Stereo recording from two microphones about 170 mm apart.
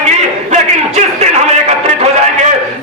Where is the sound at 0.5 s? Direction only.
40° right (ahead or behind).